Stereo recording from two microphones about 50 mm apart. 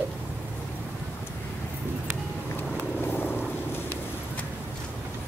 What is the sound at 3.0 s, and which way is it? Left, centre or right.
Vehicle, left.